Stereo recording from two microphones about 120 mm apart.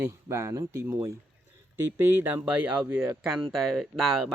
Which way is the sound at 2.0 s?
15° right (ahead or behind).